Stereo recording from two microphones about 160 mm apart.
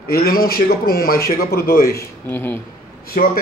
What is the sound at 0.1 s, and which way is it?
A man's voice, 70° left (ahead or behind).